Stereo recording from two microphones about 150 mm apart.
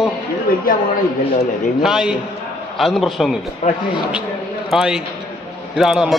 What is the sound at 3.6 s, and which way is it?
Speech, 50° left (ahead or behind).